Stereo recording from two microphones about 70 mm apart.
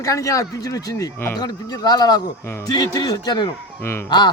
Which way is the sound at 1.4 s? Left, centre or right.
Left.